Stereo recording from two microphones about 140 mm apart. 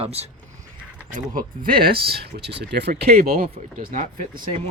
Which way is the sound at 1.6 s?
90° right.